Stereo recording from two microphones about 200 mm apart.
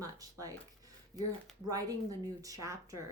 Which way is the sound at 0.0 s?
15° right (ahead or behind).